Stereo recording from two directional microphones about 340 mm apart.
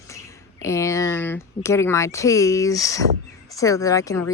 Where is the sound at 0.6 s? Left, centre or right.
Centre.